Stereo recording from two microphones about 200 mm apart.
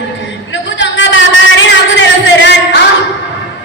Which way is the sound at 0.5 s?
70° left (ahead or behind).